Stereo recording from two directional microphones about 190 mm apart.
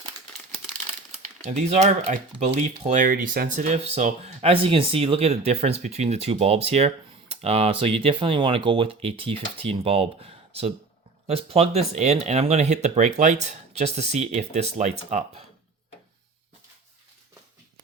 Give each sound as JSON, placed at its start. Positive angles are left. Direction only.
{"t": 1.1, "sound": "speech", "side_deg": -35}